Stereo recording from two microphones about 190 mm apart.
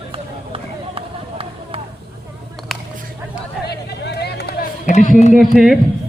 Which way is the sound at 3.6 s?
60° left (ahead or behind).